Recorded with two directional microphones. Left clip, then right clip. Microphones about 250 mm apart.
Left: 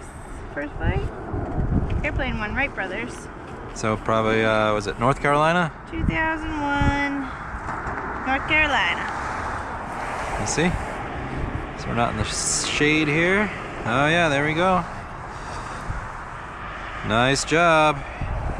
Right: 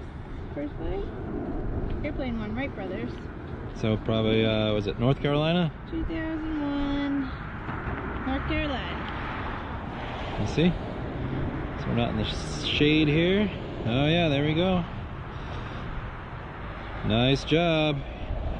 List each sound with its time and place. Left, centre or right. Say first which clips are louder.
2.5 s speech: left 8 dB; centre
3.8 s speech: left 6 dB; centre
6.6 s speech: left 9 dB; left
8.0 s vehicle: left 9 dB; left
10.3 s speech: left 3 dB; centre
11.9 s speech: left 6 dB; centre
12.2 s speech: left 6 dB; left
17.1 s speech: left 5 dB; centre